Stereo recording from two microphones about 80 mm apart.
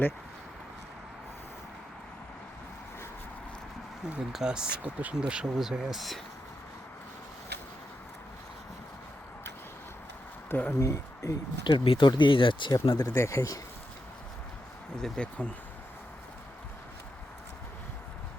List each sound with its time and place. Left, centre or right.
4.0 s speech: centre
10.5 s speech: left
11.6 s speech: left
12.7 s speech: left
13.1 s speech: left
14.9 s speech: centre